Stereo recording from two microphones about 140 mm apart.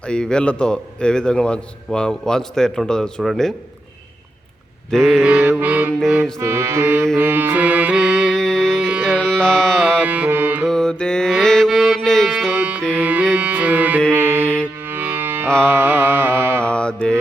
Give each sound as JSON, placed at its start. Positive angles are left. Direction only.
{"t": 0.0, "sound": "a man's voice", "side_deg": 5}
{"t": 4.9, "sound": "a man's voice", "side_deg": 5}
{"t": 5.2, "sound": "mantra", "side_deg": -10}
{"t": 7.2, "sound": "music", "side_deg": -15}
{"t": 9.8, "sound": "music", "side_deg": -10}
{"t": 10.7, "sound": "mantra", "side_deg": 5}
{"t": 12.5, "sound": "music", "side_deg": -10}
{"t": 15.4, "sound": "music", "side_deg": 5}
{"t": 15.7, "sound": "music", "side_deg": -15}
{"t": 16.6, "sound": "mantra", "side_deg": 5}